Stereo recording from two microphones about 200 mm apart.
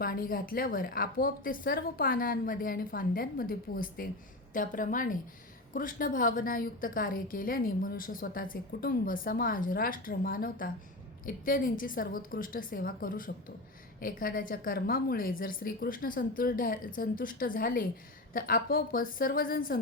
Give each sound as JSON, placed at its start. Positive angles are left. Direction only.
{"t": 0.0, "sound": "a woman's voice", "side_deg": 45}